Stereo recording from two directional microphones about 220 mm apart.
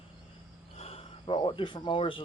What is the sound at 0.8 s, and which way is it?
Cricket, 25° left (ahead or behind).